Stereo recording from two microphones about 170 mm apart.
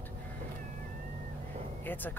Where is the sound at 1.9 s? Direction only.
10° left (ahead or behind).